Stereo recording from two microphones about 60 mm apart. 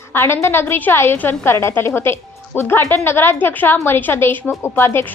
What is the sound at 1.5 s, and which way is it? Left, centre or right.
A woman's voice, left.